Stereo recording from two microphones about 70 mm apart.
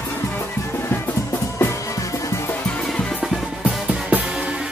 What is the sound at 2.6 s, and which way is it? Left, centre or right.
Music, centre.